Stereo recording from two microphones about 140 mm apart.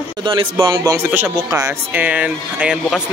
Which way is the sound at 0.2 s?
35° right (ahead or behind).